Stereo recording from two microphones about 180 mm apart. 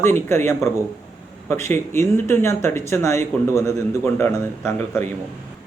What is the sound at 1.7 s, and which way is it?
A man's voice, 15° left (ahead or behind).